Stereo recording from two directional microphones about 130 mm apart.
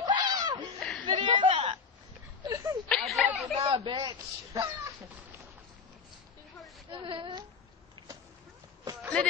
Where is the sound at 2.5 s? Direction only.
25° right (ahead or behind).